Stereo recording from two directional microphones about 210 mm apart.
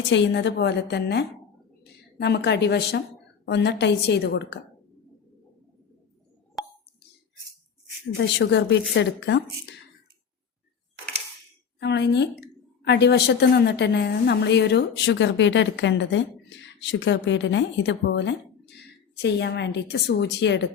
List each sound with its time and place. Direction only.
0.1 s a woman's voice: 55° left (ahead or behind)
8.2 s a woman's voice: 55° left (ahead or behind)
11.8 s a woman's voice: 55° left (ahead or behind)